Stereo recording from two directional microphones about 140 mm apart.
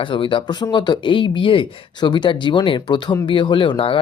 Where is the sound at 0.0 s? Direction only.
35° left (ahead or behind).